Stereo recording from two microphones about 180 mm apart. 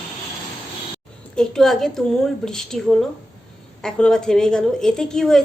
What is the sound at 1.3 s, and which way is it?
A woman's voice, 5° left (ahead or behind).